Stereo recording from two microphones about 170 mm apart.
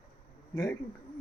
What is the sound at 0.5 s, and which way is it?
Speech, 20° left (ahead or behind).